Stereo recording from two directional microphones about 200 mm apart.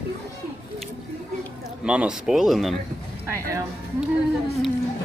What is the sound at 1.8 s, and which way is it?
Speech, 5° right (ahead or behind).